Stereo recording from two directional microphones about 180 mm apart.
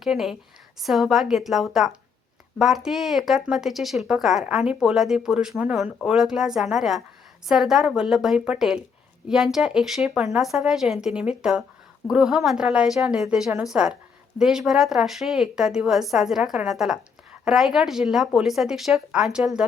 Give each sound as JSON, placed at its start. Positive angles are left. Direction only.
{"t": 0.0, "sound": "speech", "side_deg": 0}